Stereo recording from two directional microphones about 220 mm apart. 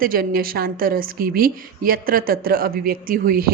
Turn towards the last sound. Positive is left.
turn(degrees=-40)  # may be behind; listen again after turning